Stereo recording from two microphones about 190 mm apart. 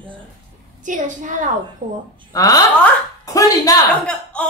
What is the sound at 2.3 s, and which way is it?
Speech, 20° left (ahead or behind).